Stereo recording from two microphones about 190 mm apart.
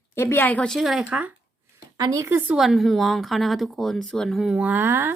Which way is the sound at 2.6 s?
Centre (ahead or behind).